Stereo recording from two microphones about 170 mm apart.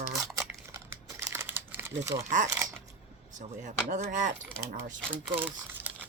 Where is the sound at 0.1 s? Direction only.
Centre (ahead or behind).